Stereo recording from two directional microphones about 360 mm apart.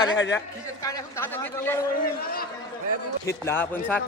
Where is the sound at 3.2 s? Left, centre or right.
Centre.